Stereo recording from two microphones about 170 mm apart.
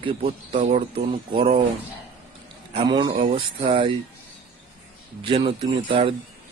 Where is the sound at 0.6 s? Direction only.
45° right (ahead or behind).